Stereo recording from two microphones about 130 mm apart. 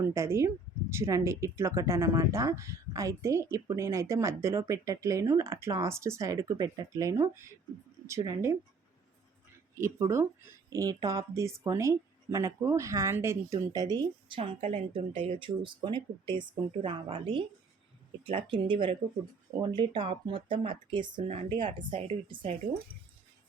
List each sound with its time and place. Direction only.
0.0 s speech: 20° right (ahead or behind)
9.7 s speech: 20° right (ahead or behind); by 22.5 s 40° right (ahead or behind)